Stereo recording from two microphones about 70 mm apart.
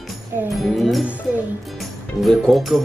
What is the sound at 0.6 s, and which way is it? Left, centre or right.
Speech, centre.